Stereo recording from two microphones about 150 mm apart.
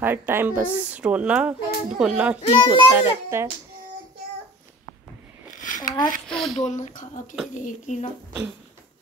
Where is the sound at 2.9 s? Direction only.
15° right (ahead or behind).